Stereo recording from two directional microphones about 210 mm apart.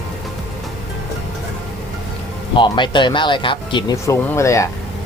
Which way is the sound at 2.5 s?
20° left (ahead or behind).